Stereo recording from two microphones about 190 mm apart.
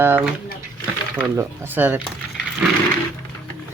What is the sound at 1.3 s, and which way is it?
Speech, 10° right (ahead or behind).